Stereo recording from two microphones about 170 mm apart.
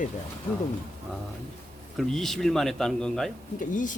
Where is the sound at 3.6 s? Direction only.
50° left (ahead or behind).